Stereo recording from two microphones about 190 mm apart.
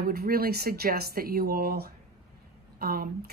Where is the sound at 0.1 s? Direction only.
55° right (ahead or behind).